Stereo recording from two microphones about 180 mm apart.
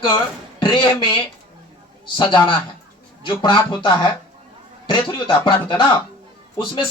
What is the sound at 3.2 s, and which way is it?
Speech, 25° left (ahead or behind).